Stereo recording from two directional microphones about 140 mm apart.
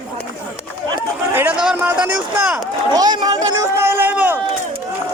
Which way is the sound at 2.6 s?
30° right (ahead or behind).